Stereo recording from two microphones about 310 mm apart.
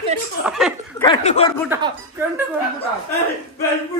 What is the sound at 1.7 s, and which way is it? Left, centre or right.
Speech, centre.